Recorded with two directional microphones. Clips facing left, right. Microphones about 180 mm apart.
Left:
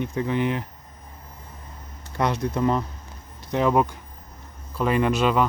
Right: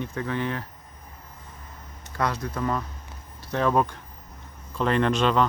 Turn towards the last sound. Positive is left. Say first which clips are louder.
# left 1 dB
turn(degrees=10)  # may be behind; listen again after turning